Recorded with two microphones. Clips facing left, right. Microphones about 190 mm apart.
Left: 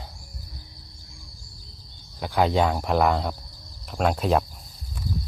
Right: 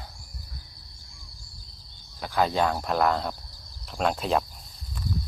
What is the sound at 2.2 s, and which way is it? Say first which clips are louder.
Speech: left 3 dB; 15° left (ahead or behind).